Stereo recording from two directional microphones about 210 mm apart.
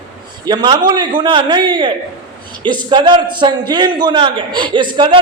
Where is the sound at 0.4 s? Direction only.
20° right (ahead or behind).